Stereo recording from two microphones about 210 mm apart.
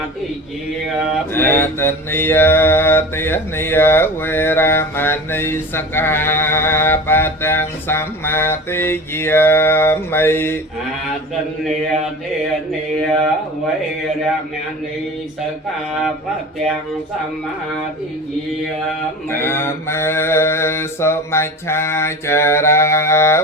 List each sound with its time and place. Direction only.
1.3 s mantra: 10° left (ahead or behind)
19.3 s mantra: 10° left (ahead or behind)